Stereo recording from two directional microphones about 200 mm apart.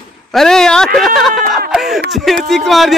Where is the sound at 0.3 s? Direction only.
Centre (ahead or behind).